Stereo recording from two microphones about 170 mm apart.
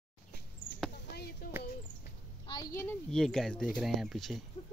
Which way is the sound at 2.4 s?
25° left (ahead or behind).